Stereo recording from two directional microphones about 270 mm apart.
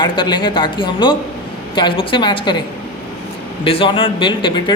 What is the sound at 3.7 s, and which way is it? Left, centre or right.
Speech, centre.